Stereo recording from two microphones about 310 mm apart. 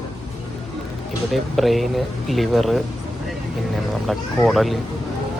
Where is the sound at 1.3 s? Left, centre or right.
Centre.